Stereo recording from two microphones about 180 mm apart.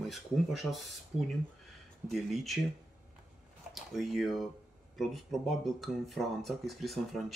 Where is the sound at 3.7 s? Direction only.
Centre (ahead or behind).